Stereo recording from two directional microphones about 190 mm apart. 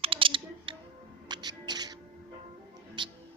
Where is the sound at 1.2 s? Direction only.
20° right (ahead or behind).